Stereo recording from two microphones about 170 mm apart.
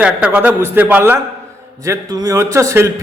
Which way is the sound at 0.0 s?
10° right (ahead or behind).